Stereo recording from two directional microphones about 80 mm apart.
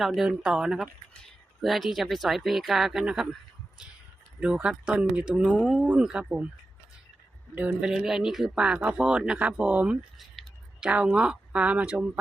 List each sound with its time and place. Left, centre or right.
0.0 s speech: centre
4.6 s speech: centre
5.5 s speech: centre
7.5 s speech: centre
7.9 s speech: centre